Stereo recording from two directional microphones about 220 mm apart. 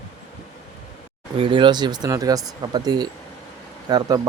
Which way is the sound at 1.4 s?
20° right (ahead or behind).